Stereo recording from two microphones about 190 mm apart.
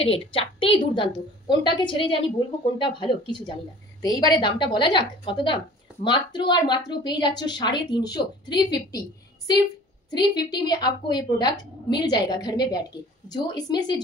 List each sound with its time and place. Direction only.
0.0 s a woman's voice: 30° left (ahead or behind)
10.1 s a woman's voice: 20° left (ahead or behind)